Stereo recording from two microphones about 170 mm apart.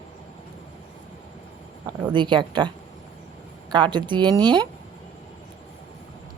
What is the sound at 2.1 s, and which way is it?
A woman's voice, 25° right (ahead or behind).